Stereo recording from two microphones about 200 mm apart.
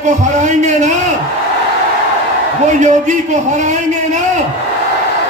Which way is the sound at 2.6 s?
35° right (ahead or behind).